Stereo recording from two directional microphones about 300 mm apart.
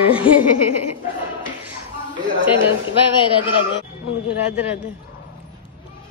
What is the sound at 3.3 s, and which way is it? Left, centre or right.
Speech, centre.